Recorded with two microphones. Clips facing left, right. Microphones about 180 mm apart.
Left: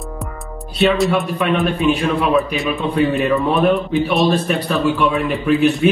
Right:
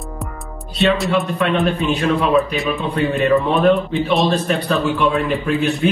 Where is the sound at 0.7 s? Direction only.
Centre (ahead or behind).